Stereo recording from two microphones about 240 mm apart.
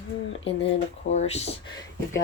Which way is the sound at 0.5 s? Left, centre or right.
Left.